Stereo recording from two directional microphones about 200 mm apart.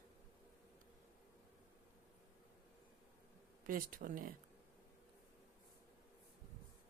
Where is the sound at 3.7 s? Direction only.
45° right (ahead or behind).